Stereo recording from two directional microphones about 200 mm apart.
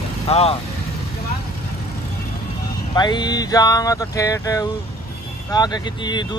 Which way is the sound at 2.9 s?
20° left (ahead or behind).